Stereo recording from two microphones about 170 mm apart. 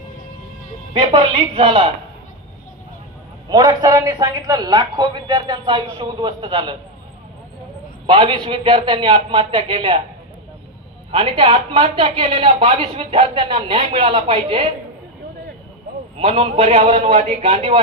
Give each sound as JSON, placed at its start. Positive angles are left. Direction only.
{"t": 1.0, "sound": "a man's voice", "side_deg": -30}
{"t": 3.5, "sound": "a man's voice", "side_deg": -25}
{"t": 8.0, "sound": "a man's voice", "side_deg": -30}
{"t": 11.1, "sound": "speech", "side_deg": -30}
{"t": 16.1, "sound": "speech", "side_deg": -35}